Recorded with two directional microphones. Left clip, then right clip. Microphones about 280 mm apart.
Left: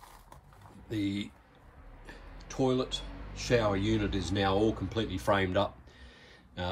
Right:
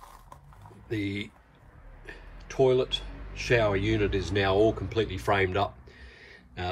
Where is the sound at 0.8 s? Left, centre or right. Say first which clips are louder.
Right 2 dB; centre.